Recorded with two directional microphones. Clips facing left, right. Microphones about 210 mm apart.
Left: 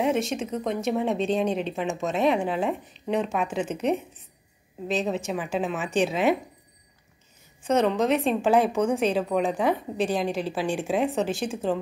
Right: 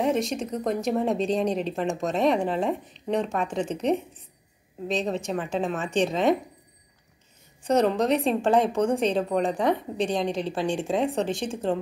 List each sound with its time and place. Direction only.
0.0 s a woman's voice: centre (ahead or behind)
7.6 s a woman's voice: centre (ahead or behind)